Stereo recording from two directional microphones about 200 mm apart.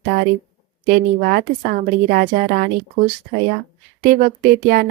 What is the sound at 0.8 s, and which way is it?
Speech, 50° right (ahead or behind).